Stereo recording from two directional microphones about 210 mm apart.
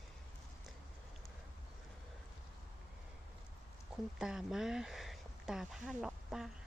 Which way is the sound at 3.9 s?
5° right (ahead or behind).